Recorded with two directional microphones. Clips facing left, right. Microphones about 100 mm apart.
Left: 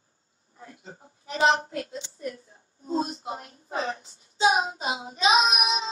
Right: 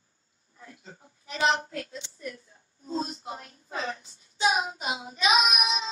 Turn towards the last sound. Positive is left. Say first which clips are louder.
# left 2 dB
turn(degrees=25)  # may be behind; listen again after turning